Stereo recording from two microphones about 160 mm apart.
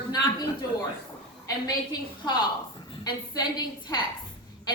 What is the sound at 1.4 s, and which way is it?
A woman's voice, 25° left (ahead or behind).